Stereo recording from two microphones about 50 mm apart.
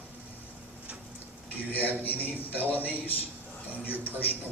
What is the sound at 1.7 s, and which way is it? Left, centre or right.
Speech, left.